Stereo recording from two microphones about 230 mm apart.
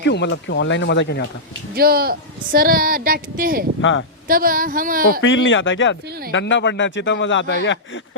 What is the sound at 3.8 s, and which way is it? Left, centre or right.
Speech, left.